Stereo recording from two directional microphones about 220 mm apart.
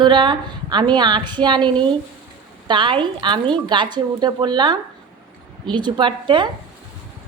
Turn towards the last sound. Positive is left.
turn(degrees=-20)  # may be behind; listen again after turning